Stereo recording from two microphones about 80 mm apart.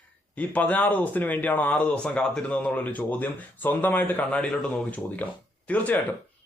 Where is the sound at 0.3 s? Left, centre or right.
Centre.